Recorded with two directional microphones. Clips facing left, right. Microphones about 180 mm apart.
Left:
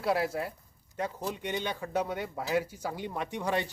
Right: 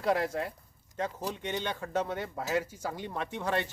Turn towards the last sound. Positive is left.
turn(degrees=15)  # may be behind; listen again after turning